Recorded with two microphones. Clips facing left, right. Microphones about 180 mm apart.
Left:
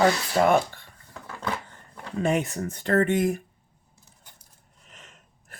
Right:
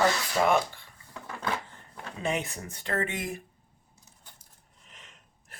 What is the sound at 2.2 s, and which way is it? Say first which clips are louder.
Speech: left 7 dB; 50° left (ahead or behind).